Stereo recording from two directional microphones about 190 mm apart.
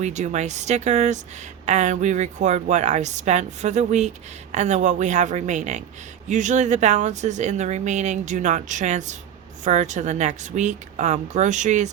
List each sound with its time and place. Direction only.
0.0 s speech: 35° right (ahead or behind)